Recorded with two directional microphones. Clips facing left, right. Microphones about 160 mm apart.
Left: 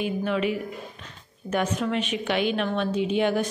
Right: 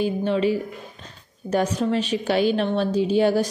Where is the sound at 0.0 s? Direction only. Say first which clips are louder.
Right 4 dB; 30° right (ahead or behind).